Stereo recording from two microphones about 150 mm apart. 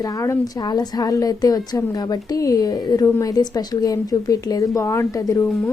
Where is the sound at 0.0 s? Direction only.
25° left (ahead or behind).